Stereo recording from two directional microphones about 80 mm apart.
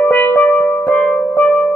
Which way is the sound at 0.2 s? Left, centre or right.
Left.